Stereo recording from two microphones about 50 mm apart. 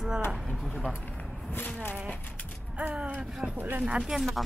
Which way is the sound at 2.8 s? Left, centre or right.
Right.